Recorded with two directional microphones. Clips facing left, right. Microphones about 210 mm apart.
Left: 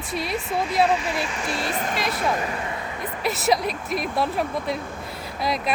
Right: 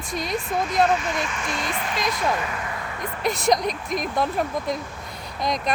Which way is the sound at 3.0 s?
5° left (ahead or behind).